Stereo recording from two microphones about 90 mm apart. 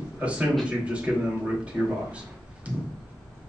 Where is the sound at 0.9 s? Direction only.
15° right (ahead or behind).